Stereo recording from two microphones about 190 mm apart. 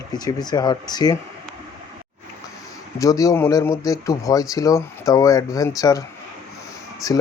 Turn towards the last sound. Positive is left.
turn(degrees=20)  # may be behind; listen again after turning